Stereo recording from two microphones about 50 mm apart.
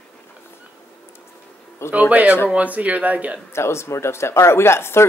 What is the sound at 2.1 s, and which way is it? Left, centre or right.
Speech, right.